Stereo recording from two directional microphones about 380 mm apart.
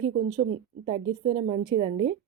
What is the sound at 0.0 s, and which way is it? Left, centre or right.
Speech, centre.